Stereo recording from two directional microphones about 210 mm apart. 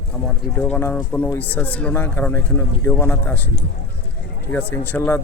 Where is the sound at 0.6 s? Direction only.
10° left (ahead or behind).